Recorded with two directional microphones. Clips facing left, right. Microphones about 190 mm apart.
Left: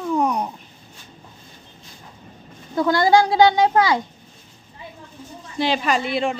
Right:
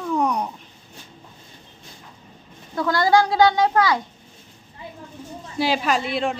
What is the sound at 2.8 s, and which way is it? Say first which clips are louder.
Speech: left 2 dB; 25° left (ahead or behind).